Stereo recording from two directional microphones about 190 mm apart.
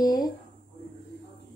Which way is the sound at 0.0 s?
20° left (ahead or behind).